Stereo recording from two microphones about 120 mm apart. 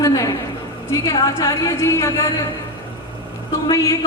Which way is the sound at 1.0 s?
30° left (ahead or behind).